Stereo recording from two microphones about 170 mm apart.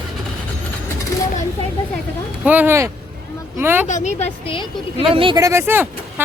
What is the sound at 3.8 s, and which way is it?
A woman's voice, 45° left (ahead or behind).